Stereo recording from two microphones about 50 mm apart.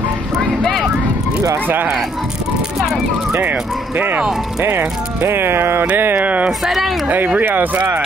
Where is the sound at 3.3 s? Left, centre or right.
Right.